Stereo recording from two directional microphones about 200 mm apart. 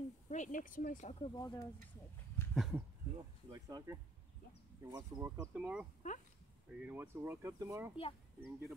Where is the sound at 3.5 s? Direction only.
20° right (ahead or behind).